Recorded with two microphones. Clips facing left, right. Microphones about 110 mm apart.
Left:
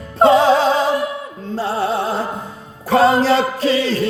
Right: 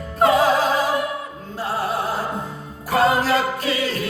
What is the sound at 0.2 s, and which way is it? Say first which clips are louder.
Music: left 5 dB; 30° left (ahead or behind).